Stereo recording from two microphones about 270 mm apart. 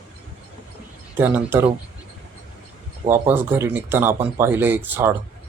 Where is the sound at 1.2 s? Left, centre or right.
Centre.